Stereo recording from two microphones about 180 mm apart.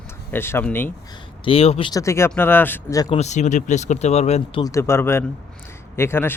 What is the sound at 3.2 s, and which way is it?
Speech, 40° left (ahead or behind).